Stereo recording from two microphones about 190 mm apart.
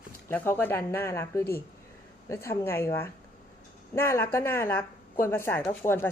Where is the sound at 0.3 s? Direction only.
10° left (ahead or behind).